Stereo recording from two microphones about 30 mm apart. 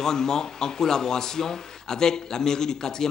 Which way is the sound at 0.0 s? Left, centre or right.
Centre.